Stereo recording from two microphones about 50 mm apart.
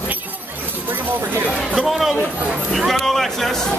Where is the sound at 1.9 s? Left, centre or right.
Centre.